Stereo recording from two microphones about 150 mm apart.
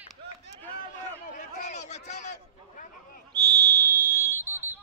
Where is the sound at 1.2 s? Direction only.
55° left (ahead or behind).